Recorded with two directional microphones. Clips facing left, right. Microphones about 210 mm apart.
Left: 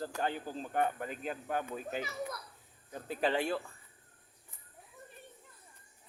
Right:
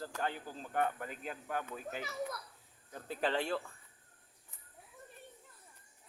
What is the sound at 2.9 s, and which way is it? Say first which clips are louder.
Speech: left 3 dB; 15° left (ahead or behind).